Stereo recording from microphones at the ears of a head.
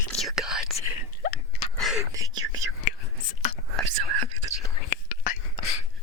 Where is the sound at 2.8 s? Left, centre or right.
Left.